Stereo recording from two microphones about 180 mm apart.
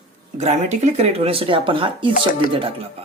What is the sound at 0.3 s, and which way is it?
Speech, 40° right (ahead or behind).